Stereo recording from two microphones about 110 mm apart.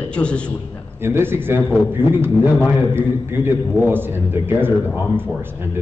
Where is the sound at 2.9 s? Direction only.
20° right (ahead or behind).